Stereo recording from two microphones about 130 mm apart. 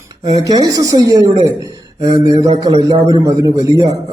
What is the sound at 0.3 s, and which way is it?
Speech, 30° right (ahead or behind).